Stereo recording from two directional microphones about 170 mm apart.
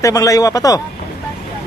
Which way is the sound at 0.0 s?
20° left (ahead or behind).